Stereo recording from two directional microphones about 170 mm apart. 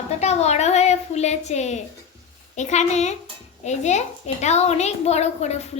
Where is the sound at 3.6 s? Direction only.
40° left (ahead or behind).